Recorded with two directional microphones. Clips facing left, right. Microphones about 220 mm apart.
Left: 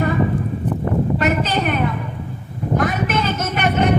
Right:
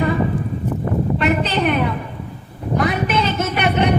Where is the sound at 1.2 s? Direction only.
45° left (ahead or behind).